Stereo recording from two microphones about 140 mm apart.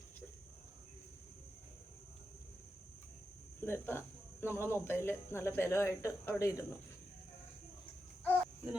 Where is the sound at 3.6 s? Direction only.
20° left (ahead or behind).